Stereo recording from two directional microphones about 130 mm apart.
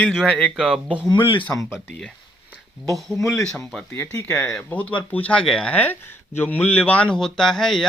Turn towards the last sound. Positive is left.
turn(degrees=5)  # may be behind; listen again after turning